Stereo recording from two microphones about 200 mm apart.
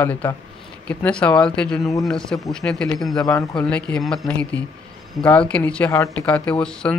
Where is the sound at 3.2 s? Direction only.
15° left (ahead or behind).